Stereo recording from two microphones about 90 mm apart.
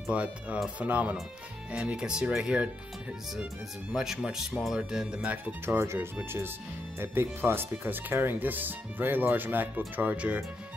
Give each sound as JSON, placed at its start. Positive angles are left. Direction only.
{"t": 0.1, "sound": "speech", "side_deg": -15}
{"t": 3.9, "sound": "speech", "side_deg": -5}
{"t": 5.7, "sound": "speech", "side_deg": -30}
{"t": 7.0, "sound": "speech", "side_deg": -25}